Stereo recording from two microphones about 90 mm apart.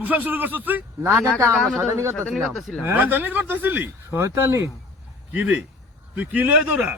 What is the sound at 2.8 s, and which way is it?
A man's voice, 20° right (ahead or behind).